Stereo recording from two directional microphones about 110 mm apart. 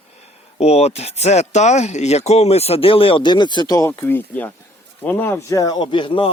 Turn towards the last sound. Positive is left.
turn(degrees=50)  # may be behind; listen again after turning